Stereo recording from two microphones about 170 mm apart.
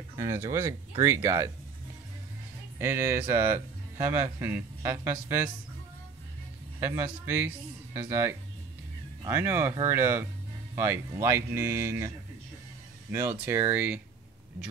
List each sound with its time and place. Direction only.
0.2 s a man's voice: 15° right (ahead or behind)
2.8 s a man's voice: 15° right (ahead or behind)
7.9 s a man's voice: 15° right (ahead or behind)
13.1 s a man's voice: 15° right (ahead or behind)